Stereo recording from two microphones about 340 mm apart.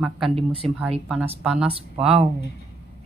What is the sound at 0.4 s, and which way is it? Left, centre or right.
Speech, centre.